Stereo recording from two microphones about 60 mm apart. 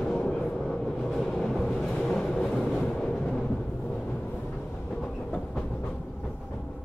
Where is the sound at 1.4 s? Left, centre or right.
Centre.